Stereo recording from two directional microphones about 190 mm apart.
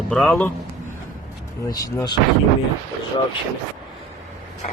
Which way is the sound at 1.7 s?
20° left (ahead or behind).